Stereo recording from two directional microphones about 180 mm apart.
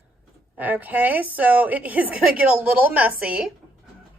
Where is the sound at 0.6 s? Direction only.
10° right (ahead or behind).